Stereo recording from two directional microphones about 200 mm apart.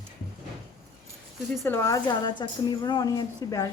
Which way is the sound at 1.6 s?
15° left (ahead or behind).